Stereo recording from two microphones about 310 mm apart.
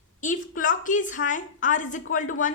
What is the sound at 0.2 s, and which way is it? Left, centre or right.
A woman's voice, left.